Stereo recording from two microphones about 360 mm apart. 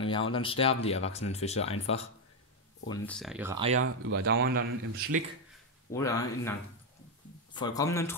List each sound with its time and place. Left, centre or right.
0.0 s speech: centre
2.9 s speech: centre
3.8 s speech: right
5.9 s speech: centre
7.5 s speech: centre